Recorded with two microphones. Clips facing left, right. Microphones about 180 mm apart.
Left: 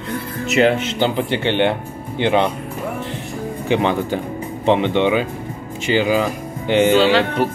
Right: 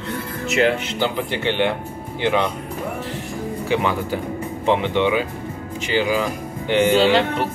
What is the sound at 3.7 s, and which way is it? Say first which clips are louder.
Speech: left 4 dB; 25° left (ahead or behind).